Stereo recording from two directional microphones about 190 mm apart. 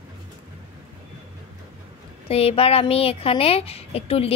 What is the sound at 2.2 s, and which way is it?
A woman's voice, 30° left (ahead or behind).